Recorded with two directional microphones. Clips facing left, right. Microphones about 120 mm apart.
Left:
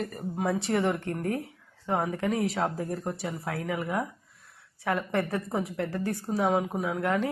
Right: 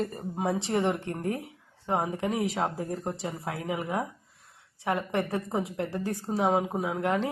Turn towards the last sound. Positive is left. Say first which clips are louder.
# even
turn(degrees=-20)  # may be behind; listen again after turning